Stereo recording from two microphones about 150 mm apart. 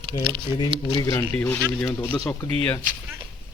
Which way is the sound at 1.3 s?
10° left (ahead or behind).